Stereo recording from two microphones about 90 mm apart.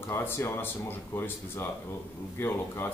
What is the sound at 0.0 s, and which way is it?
Speech, 25° left (ahead or behind).